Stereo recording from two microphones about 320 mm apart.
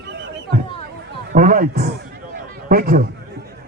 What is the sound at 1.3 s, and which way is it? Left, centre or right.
A man's voice, right.